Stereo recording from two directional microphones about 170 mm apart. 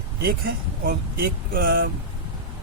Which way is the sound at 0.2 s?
60° right (ahead or behind).